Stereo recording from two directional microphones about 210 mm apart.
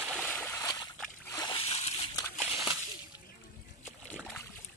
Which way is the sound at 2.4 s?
5° right (ahead or behind).